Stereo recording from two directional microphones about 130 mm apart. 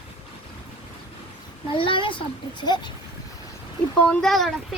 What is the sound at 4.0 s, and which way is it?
Speech, 5° left (ahead or behind).